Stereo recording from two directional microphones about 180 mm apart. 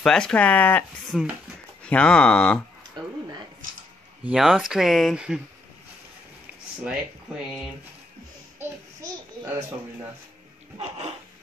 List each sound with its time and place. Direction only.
0.0 s speech: 5° left (ahead or behind)
4.2 s speech: 5° right (ahead or behind)
6.8 s speech: 5° right (ahead or behind)
8.5 s babbling: 15° right (ahead or behind)